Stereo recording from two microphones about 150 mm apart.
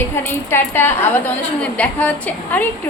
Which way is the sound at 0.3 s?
15° left (ahead or behind).